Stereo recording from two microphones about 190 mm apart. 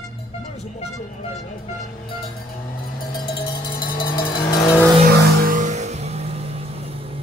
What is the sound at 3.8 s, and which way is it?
Cowbell, 50° left (ahead or behind).